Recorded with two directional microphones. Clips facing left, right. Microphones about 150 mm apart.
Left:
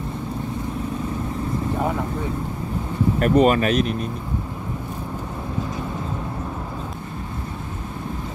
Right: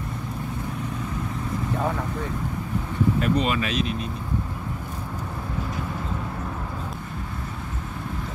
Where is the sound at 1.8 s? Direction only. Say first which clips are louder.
Left 2 dB; 15° left (ahead or behind).